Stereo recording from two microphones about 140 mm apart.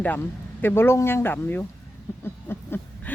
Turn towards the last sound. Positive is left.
turn(degrees=15)  # may be behind; listen again after turning